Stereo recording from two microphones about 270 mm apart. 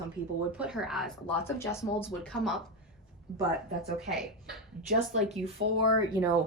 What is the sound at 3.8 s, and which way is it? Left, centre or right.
Speech, centre.